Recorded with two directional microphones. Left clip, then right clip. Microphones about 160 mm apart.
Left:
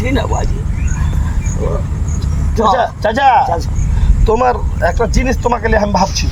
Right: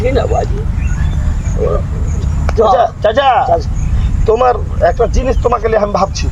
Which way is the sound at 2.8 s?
Centre (ahead or behind).